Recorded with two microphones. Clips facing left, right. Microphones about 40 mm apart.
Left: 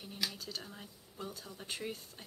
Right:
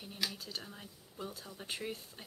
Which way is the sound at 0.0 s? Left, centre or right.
Centre.